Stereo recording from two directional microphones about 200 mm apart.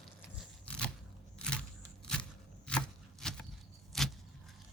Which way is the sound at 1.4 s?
5° left (ahead or behind).